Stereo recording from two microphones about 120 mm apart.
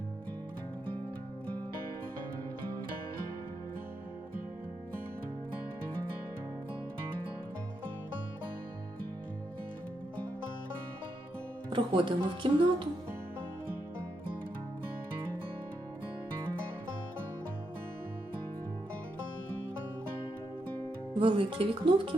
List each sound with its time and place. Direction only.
11.7 s speech: 45° right (ahead or behind)
21.2 s speech: 45° right (ahead or behind)